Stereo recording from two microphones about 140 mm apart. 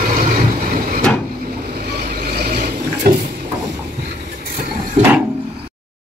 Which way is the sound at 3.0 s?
90° right.